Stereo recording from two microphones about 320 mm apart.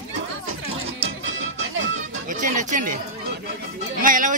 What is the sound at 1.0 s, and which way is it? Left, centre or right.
Music, right.